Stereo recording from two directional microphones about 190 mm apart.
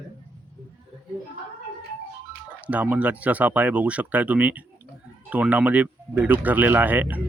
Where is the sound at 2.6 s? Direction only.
10° right (ahead or behind).